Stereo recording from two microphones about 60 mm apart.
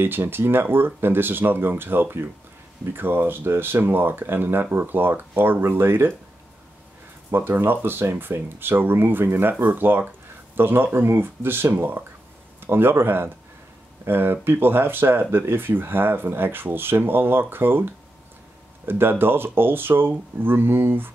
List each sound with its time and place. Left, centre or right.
0.0 s speech: right
7.2 s a man's voice: right